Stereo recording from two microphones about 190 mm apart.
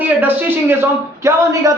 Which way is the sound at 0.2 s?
10° right (ahead or behind).